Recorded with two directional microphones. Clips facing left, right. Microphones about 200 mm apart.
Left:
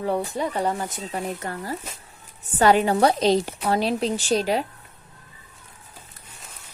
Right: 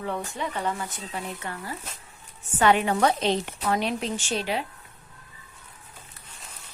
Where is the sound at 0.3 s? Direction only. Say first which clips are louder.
Left 5 dB; 35° left (ahead or behind).